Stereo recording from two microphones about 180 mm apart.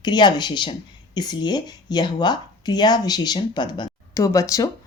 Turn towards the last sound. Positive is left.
turn(degrees=20)  # may be behind; listen again after turning